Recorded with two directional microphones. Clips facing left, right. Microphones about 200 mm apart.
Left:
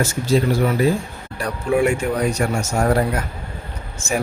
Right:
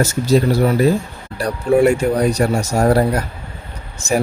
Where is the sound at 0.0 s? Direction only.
40° right (ahead or behind).